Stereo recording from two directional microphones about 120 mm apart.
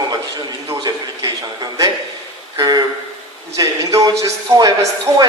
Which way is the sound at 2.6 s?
35° right (ahead or behind).